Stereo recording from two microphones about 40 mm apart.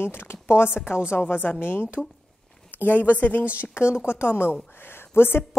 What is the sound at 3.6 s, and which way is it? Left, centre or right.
Speech, left.